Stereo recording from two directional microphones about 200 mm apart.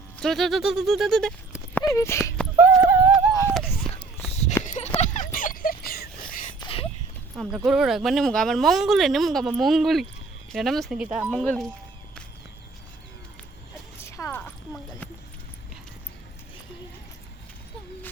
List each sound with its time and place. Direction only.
0.2 s speech: centre (ahead or behind)
1.8 s speech: 15° left (ahead or behind)
2.6 s clip-clop: 5° right (ahead or behind)
4.3 s a sound: 35° left (ahead or behind)
4.6 s dog: 35° left (ahead or behind)
6.6 s a sound: 25° left (ahead or behind)
7.3 s speech: centre (ahead or behind)
11.3 s speech: 5° left (ahead or behind)
14.0 s a sound: 15° left (ahead or behind)